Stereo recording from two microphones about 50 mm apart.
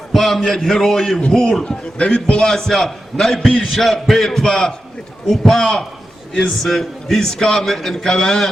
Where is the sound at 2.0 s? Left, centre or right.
Left.